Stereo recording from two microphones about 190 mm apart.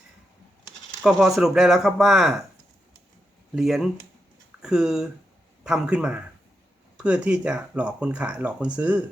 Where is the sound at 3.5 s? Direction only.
5° right (ahead or behind).